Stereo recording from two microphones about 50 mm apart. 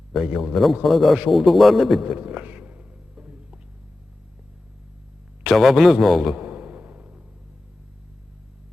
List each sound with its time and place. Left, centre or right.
0.3 s a man's voice: centre
0.6 s a man's voice: centre
2.0 s a man's voice: right
2.4 s a sound: right
5.4 s a man's voice: centre
6.3 s a sound: right